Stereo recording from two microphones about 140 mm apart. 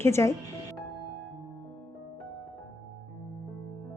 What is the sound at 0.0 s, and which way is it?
Speech, 20° left (ahead or behind).